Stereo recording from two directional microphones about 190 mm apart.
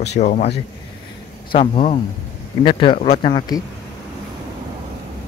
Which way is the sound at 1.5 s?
30° left (ahead or behind).